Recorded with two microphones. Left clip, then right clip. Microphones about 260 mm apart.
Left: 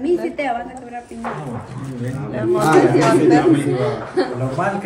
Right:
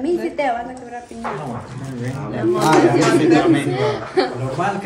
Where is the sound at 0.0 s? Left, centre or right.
Right.